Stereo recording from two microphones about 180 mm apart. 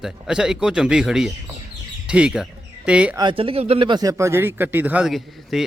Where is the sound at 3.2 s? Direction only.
30° right (ahead or behind).